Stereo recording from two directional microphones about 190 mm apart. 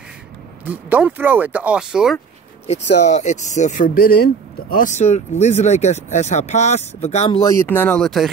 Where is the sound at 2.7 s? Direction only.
35° left (ahead or behind).